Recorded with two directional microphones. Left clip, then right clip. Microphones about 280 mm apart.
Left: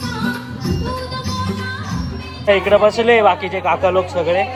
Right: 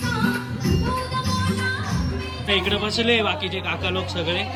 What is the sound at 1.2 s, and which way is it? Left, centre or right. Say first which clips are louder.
Music: left 2 dB; left.